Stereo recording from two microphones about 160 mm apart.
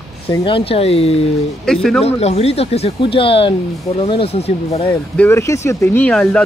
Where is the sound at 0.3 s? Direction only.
35° left (ahead or behind).